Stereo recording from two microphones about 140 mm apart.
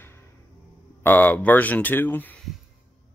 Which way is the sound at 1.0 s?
15° left (ahead or behind).